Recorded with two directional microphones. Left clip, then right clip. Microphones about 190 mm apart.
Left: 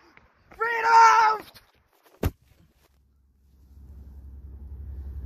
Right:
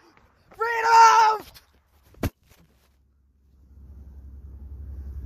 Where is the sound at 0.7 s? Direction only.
30° right (ahead or behind).